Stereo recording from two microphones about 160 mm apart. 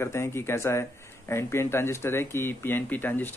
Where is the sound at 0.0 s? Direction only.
15° left (ahead or behind).